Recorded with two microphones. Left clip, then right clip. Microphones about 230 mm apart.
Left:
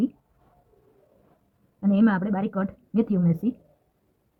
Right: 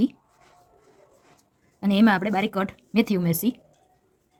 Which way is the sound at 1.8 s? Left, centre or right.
Right.